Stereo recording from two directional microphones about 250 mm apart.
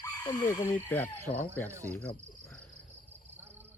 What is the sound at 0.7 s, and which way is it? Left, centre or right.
Speech, centre.